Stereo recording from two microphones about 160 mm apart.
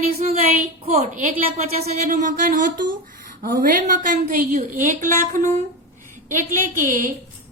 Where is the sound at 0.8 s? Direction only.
45° right (ahead or behind).